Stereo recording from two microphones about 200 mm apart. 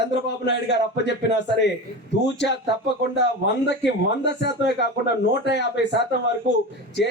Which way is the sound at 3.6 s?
60° left (ahead or behind).